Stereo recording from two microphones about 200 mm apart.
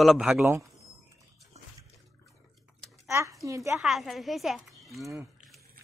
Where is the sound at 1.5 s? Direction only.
35° right (ahead or behind).